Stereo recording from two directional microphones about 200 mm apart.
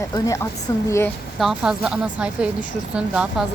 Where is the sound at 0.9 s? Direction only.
15° left (ahead or behind).